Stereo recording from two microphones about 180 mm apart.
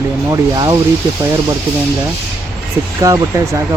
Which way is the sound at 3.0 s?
15° right (ahead or behind).